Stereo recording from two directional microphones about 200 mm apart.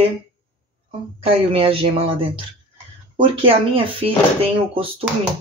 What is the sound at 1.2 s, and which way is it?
Speech, 30° right (ahead or behind).